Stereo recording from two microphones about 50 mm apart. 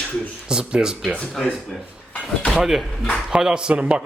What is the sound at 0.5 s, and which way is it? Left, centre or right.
Speech, centre.